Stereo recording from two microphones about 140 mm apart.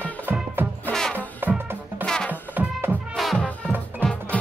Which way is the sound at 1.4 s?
15° right (ahead or behind).